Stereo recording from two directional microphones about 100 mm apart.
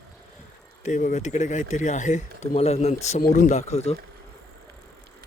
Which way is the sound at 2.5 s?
90° left.